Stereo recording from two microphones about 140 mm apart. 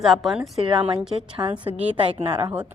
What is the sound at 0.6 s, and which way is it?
A woman's voice, 35° right (ahead or behind).